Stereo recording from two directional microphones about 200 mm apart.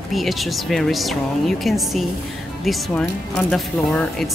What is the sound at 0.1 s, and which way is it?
Speech, centre (ahead or behind).